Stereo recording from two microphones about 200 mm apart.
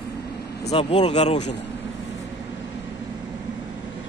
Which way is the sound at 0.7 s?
30° left (ahead or behind).